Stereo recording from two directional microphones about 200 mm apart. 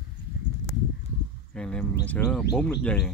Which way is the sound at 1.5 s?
5° left (ahead or behind).